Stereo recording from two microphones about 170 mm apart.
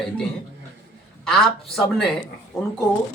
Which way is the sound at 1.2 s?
Centre (ahead or behind).